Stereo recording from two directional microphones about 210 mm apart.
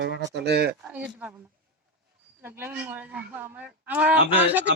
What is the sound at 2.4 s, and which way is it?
Speech, 10° right (ahead or behind).